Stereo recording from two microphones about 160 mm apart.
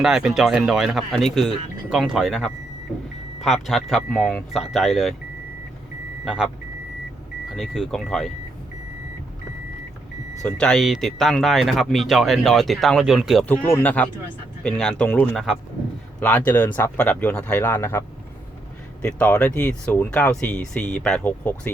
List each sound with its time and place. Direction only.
0.0 s speech: 5° right (ahead or behind)
6.2 s speech: 5° right (ahead or behind)
7.5 s speech: centre (ahead or behind)
10.4 s speech: 5° left (ahead or behind)
13.7 s speech: 10° left (ahead or behind)
19.0 s speech: 10° left (ahead or behind)